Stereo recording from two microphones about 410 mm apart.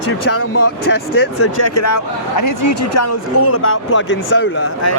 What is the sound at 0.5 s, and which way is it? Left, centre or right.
Speech, left.